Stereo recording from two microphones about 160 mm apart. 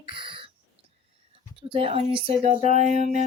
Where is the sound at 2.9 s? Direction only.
55° left (ahead or behind).